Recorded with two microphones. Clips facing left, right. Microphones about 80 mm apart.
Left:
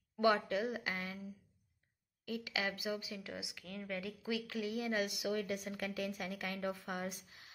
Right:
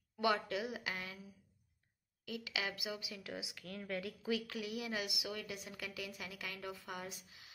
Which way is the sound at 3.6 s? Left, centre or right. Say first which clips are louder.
Even; centre.